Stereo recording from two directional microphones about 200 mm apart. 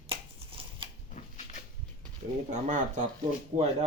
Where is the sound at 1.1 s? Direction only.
35° left (ahead or behind).